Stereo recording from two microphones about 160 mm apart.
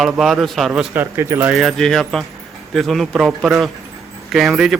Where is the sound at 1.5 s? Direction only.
Centre (ahead or behind).